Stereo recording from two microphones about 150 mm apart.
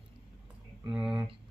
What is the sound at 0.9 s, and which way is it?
Speech, 5° right (ahead or behind).